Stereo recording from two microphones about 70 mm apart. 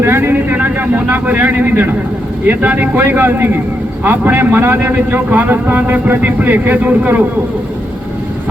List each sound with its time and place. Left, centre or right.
0.0 s vehicle: right
2.5 s a man's voice: right